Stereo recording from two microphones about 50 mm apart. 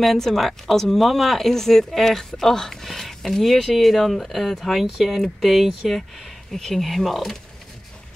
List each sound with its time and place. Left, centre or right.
0.0 s speech: centre